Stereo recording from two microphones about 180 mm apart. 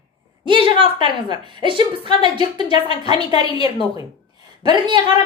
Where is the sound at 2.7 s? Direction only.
30° left (ahead or behind).